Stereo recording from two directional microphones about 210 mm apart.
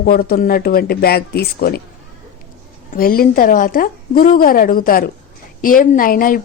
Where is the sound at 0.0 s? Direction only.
45° left (ahead or behind).